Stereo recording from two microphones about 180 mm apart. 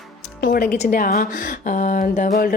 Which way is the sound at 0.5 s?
60° left (ahead or behind).